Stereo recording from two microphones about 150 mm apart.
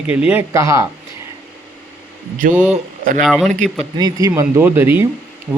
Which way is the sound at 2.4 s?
65° right (ahead or behind).